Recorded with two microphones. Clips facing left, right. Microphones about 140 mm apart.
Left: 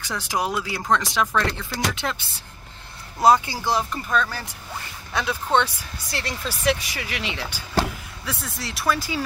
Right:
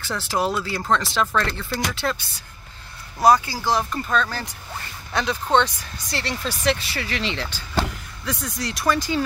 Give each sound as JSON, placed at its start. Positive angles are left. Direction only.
{"t": 0.0, "sound": "speech", "side_deg": 15}
{"t": 3.2, "sound": "speech", "side_deg": 25}
{"t": 3.6, "sound": "speech", "side_deg": 10}